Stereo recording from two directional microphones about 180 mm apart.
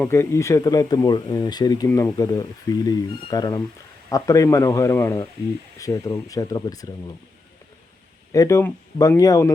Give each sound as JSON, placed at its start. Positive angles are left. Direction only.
{"t": 0.0, "sound": "speech", "side_deg": 15}
{"t": 8.3, "sound": "speech", "side_deg": 15}